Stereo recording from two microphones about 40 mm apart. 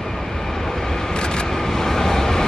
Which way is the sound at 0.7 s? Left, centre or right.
Centre.